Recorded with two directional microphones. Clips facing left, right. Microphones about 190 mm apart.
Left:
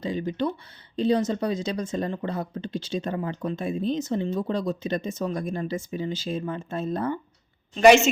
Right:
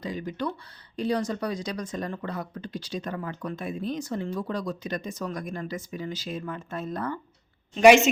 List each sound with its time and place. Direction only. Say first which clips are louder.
0.0 s speech: left 4 dB; 25° left (ahead or behind)
7.8 s a woman's voice: even; 15° right (ahead or behind)